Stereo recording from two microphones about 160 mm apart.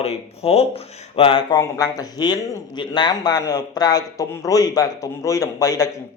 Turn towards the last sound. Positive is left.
turn(degrees=20)  # may be behind; listen again after turning